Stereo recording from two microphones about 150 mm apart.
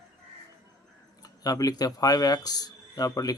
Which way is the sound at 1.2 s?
25° left (ahead or behind).